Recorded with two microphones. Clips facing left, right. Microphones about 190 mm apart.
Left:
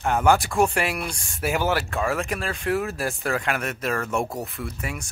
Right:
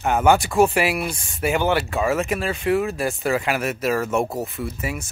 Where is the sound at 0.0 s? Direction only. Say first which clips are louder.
Right 2 dB; 5° right (ahead or behind).